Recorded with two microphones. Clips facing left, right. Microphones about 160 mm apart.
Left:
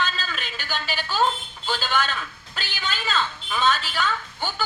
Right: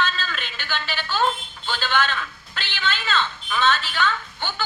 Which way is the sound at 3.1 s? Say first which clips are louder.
Left 1 dB; 10° left (ahead or behind).